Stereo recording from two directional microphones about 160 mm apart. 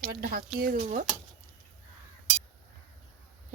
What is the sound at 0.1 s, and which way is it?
Speech, 65° right (ahead or behind).